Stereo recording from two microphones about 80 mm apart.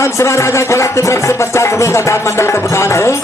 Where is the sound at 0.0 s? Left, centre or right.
Left.